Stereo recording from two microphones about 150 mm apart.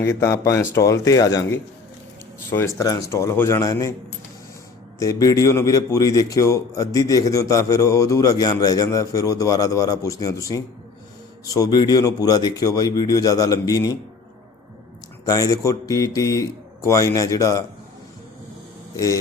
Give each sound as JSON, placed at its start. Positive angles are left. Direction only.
{"t": 0.0, "sound": "a man's voice", "side_deg": 20}
{"t": 4.9, "sound": "a man's voice", "side_deg": 20}
{"t": 15.3, "sound": "a man's voice", "side_deg": 20}
{"t": 18.9, "sound": "a man's voice", "side_deg": 20}